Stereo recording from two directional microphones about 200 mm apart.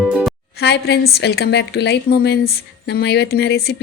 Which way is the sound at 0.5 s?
55° left (ahead or behind).